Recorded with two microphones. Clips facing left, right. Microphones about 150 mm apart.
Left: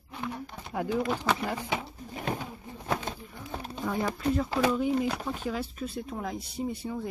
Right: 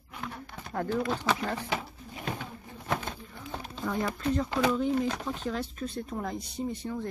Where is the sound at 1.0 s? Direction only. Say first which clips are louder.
Left 1 dB; 5° left (ahead or behind).